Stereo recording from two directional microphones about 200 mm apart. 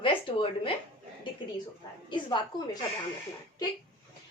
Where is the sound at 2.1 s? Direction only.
20° left (ahead or behind).